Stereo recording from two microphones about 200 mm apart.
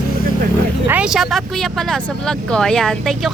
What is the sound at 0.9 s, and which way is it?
A woman's voice, 5° right (ahead or behind).